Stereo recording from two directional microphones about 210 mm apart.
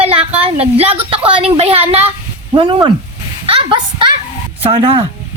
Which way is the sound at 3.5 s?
25° right (ahead or behind).